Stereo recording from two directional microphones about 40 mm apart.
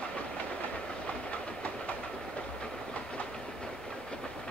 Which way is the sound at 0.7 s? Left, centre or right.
Left.